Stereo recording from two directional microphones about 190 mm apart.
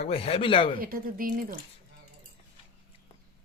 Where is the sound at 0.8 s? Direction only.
50° right (ahead or behind).